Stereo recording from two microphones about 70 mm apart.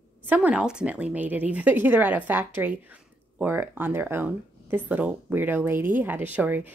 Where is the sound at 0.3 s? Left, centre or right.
Centre.